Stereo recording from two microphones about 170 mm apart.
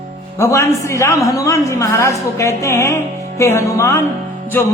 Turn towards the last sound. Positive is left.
turn(degrees=10)  # may be behind; listen again after turning